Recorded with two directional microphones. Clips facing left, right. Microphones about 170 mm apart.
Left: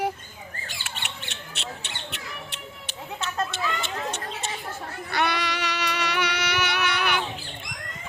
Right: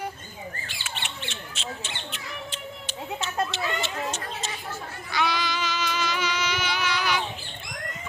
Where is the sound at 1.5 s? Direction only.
65° left (ahead or behind).